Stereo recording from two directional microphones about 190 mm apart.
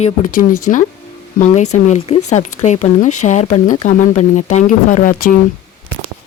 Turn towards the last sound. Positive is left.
turn(degrees=45)  # may be behind; listen again after turning